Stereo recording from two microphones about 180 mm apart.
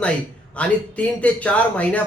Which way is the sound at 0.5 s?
5° left (ahead or behind).